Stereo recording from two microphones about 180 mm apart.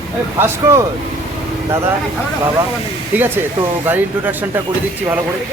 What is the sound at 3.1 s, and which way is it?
Speech, 10° right (ahead or behind).